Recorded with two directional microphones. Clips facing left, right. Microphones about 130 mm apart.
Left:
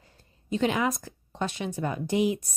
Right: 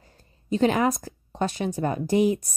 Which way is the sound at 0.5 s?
40° right (ahead or behind).